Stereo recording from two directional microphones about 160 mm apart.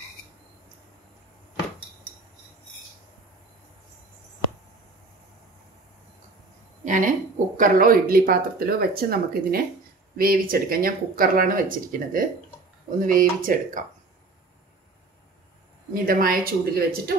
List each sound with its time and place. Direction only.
6.8 s speech: 50° right (ahead or behind)
15.9 s speech: 65° right (ahead or behind)